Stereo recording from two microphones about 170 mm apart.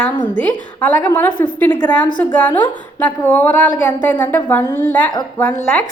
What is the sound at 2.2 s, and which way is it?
A woman's voice, 10° left (ahead or behind).